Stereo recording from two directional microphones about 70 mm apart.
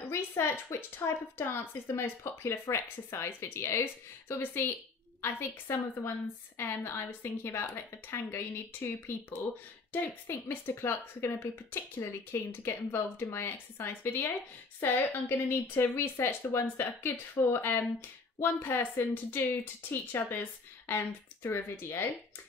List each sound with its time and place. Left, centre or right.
0.1 s a woman's voice: left
7.1 s a woman's voice: left